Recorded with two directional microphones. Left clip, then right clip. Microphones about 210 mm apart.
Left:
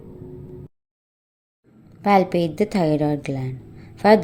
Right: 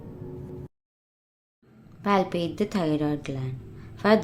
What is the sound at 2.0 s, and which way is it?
A woman's voice, 20° left (ahead or behind).